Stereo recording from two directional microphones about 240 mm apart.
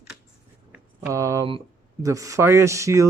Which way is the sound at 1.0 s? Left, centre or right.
Centre.